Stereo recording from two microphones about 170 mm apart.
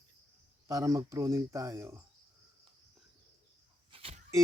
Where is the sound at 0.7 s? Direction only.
20° right (ahead or behind).